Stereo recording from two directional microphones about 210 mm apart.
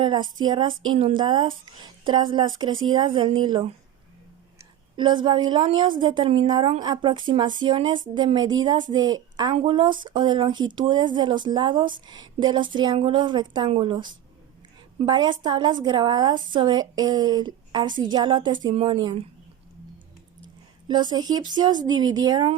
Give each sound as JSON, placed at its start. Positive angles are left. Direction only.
{"t": 0.0, "sound": "a woman's voice", "side_deg": -20}
{"t": 4.9, "sound": "a woman's voice", "side_deg": -20}
{"t": 20.8, "sound": "a woman's voice", "side_deg": -20}